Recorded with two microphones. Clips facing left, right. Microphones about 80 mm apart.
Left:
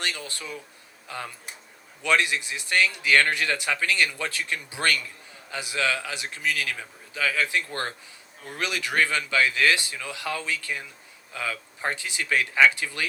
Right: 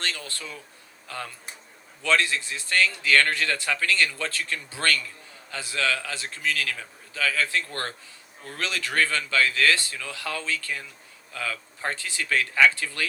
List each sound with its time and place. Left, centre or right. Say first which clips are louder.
0.0 s a man's voice: left 1 dB; centre